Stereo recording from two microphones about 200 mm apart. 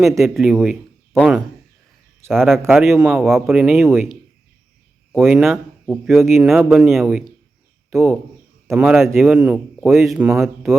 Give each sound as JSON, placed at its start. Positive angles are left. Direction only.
{"t": 0.2, "sound": "a man's voice", "side_deg": 0}
{"t": 5.1, "sound": "a man's voice", "side_deg": 0}